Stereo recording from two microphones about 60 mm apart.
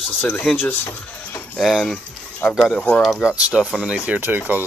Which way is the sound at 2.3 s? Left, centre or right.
Centre.